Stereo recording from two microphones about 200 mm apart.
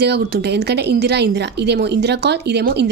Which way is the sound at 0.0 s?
55° right (ahead or behind).